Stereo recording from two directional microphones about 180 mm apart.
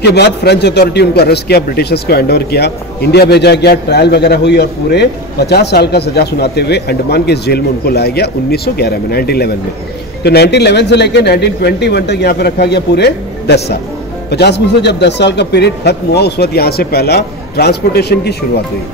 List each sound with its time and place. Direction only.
0.0 s a man's voice: 65° left (ahead or behind)